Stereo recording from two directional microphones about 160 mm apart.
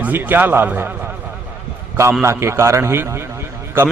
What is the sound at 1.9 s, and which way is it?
A man's voice, 15° right (ahead or behind).